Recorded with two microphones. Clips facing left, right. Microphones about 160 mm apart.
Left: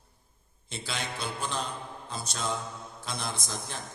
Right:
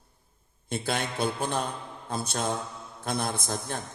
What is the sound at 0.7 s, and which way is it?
A man's voice, 55° right (ahead or behind).